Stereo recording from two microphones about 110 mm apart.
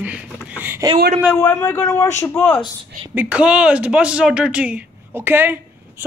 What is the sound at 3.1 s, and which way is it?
A woman's voice, 15° right (ahead or behind).